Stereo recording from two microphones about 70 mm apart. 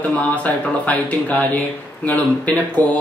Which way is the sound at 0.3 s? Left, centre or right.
Left.